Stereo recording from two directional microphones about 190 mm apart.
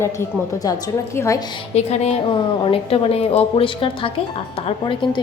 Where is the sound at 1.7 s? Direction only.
35° left (ahead or behind).